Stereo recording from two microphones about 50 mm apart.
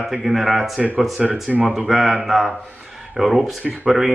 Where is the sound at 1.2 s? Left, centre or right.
Right.